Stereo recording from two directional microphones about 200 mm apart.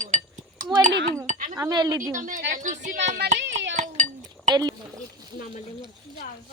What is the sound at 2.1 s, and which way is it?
Speech, 40° right (ahead or behind).